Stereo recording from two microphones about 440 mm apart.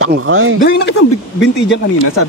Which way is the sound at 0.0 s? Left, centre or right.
Right.